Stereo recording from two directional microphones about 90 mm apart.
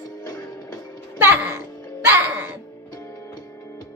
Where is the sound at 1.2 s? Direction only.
25° right (ahead or behind).